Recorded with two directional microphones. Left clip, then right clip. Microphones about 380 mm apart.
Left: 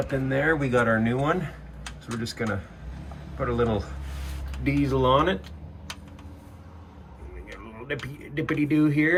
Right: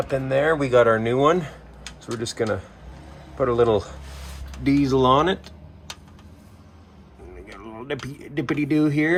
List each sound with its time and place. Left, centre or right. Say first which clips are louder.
0.0 s speech: right 4 dB; centre
7.4 s speech: right 3 dB; centre